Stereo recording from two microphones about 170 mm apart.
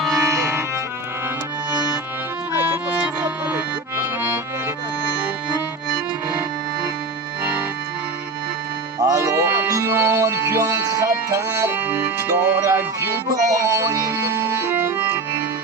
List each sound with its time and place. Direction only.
0.2 s music: 15° right (ahead or behind)
2.6 s accordion: 10° right (ahead or behind)
9.0 s music: 20° right (ahead or behind)